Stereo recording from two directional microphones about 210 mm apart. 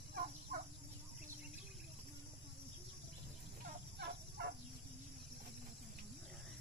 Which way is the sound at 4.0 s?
55° right (ahead or behind).